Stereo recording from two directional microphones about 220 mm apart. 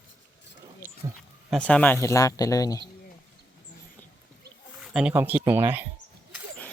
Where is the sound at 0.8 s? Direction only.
10° right (ahead or behind).